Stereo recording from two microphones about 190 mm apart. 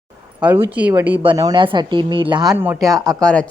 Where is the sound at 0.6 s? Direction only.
10° right (ahead or behind).